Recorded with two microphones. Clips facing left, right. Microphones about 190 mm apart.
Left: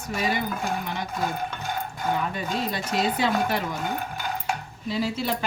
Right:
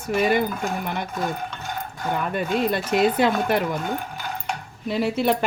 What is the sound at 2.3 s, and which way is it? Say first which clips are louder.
Speech: right 6 dB; 60° right (ahead or behind).